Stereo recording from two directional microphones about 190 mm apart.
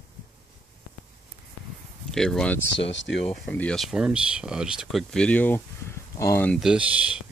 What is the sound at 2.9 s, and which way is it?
Speech, 75° left (ahead or behind).